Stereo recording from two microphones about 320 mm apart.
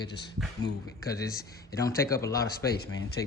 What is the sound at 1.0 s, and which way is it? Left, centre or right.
Speech, centre.